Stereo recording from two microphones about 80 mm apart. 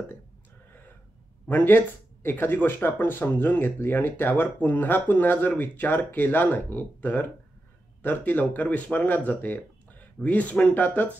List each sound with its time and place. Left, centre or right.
1.5 s speech: left